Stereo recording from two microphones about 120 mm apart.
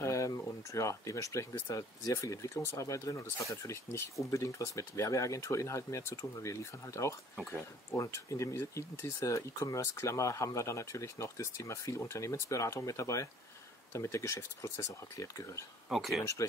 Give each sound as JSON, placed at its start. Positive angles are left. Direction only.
{"t": 0.0, "sound": "speech", "side_deg": 25}
{"t": 15.9, "sound": "speech", "side_deg": 0}